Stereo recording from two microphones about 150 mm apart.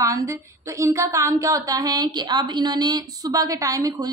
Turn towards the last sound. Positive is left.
turn(degrees=-25)  # may be behind; listen again after turning